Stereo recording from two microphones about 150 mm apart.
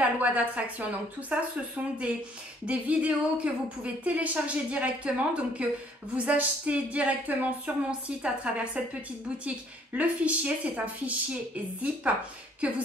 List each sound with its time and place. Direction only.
0.0 s a woman's voice: 10° right (ahead or behind)
2.6 s a woman's voice: 10° right (ahead or behind)